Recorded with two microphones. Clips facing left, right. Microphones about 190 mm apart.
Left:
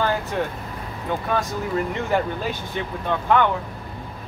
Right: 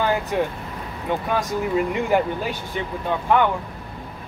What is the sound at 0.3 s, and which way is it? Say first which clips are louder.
Speech: right 2 dB; 10° right (ahead or behind).